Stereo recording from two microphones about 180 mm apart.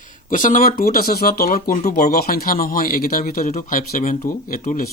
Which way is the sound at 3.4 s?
45° left (ahead or behind).